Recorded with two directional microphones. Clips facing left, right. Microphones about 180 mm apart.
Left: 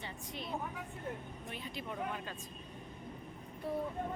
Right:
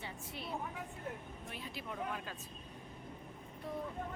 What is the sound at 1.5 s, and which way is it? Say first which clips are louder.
Speech: left 2 dB; centre (ahead or behind).